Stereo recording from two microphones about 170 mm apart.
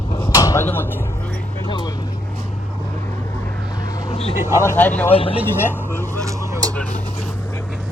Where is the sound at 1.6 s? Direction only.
25° left (ahead or behind).